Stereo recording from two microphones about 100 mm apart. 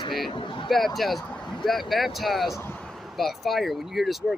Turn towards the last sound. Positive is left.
turn(degrees=0)  # may be behind; listen again after turning